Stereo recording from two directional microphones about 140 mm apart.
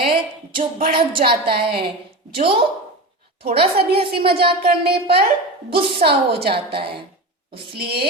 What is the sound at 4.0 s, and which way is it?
Speech, 40° right (ahead or behind).